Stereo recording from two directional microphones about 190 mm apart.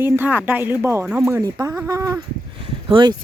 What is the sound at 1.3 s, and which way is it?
Speech, 20° right (ahead or behind).